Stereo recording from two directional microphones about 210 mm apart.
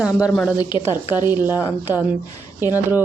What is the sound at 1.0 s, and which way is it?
Speech, 20° left (ahead or behind).